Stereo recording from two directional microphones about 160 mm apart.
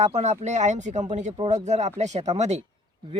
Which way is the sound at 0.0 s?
45° right (ahead or behind).